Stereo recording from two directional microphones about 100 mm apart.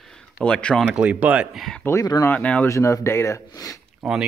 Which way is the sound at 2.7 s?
30° left (ahead or behind).